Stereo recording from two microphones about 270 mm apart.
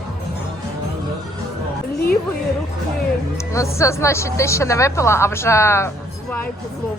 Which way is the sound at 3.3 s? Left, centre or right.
Centre.